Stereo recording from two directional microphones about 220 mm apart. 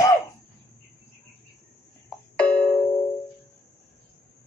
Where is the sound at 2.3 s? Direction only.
5° left (ahead or behind).